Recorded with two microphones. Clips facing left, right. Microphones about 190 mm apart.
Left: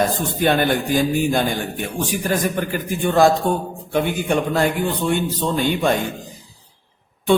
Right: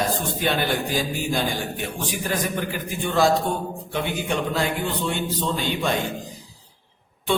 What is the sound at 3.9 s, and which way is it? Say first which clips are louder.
A man's voice: left 6 dB; 50° left (ahead or behind).